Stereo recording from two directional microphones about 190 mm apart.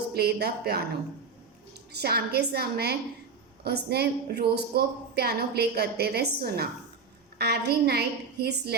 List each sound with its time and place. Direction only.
0.1 s speech: 55° right (ahead or behind)
1.9 s speech: 55° right (ahead or behind)